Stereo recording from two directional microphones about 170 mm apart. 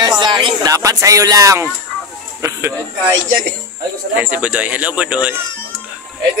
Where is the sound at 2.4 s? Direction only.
15° right (ahead or behind).